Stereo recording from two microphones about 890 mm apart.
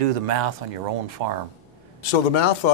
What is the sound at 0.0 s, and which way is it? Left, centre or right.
Speech, right.